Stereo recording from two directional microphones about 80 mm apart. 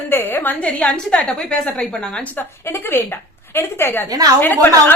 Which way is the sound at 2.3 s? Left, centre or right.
Left.